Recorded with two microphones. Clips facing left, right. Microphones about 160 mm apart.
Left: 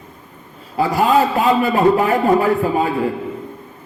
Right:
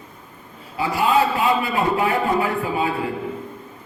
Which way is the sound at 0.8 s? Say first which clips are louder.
Left 4 dB; 40° left (ahead or behind).